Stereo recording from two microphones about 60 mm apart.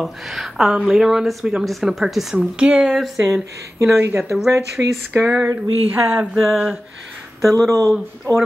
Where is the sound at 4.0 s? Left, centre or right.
Right.